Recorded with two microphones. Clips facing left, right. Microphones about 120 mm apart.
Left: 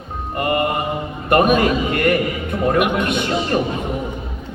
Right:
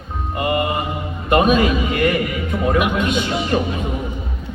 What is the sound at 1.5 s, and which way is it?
A man's voice, 55° left (ahead or behind).